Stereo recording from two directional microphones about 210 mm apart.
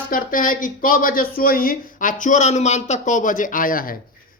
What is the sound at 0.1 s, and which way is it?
Speech, 40° left (ahead or behind).